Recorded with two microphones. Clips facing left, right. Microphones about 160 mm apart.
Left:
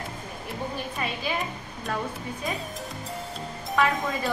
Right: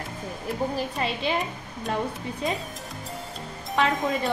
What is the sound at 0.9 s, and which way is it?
Speech, 30° right (ahead or behind).